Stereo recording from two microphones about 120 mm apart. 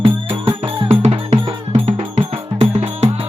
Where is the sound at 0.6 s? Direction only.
50° right (ahead or behind).